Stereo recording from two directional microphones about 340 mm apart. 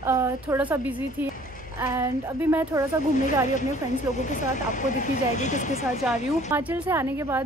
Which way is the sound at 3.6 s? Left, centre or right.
Left.